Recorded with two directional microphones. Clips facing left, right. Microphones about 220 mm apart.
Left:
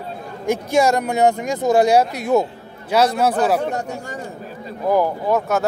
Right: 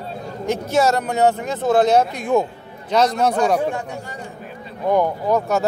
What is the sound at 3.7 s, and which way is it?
Speech, 40° left (ahead or behind).